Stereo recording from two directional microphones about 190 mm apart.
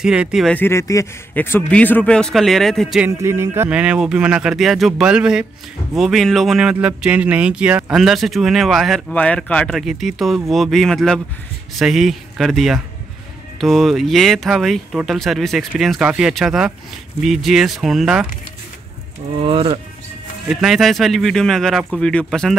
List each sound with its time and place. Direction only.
0.0 s speech: 5° right (ahead or behind)
3.1 s speech: 15° right (ahead or behind)
19.4 s speech: 30° right (ahead or behind)
20.4 s speech: centre (ahead or behind)